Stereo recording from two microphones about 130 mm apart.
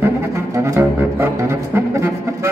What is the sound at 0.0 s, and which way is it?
Music, 20° right (ahead or behind).